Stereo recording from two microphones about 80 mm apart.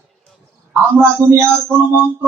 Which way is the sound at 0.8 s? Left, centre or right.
Right.